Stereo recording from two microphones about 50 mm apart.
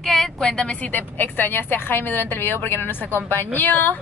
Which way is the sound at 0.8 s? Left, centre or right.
Left.